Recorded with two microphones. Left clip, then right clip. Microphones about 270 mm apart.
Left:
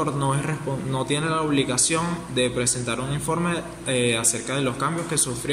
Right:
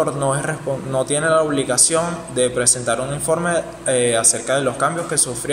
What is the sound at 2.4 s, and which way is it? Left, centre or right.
A man's voice, centre.